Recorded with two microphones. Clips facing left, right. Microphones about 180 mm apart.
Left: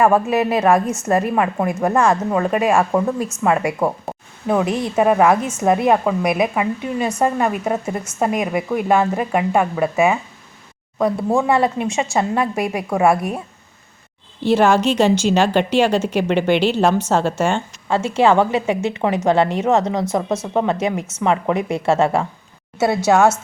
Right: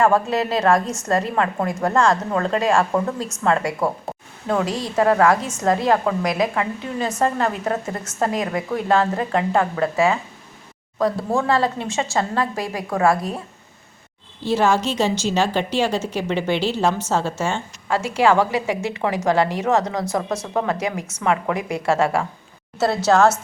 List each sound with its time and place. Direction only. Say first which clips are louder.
0.0 s a woman's voice: left 3 dB; 20° left (ahead or behind)
14.4 s a woman's voice: left 4 dB; 60° left (ahead or behind)
17.8 s a woman's voice: left 2 dB; 25° left (ahead or behind)
23.1 s a woman's voice: left 1 dB; 10° left (ahead or behind)